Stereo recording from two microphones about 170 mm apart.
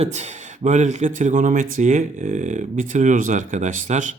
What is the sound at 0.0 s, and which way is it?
Speech, 40° right (ahead or behind).